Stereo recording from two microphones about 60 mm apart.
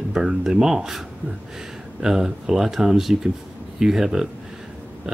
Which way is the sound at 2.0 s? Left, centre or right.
Centre.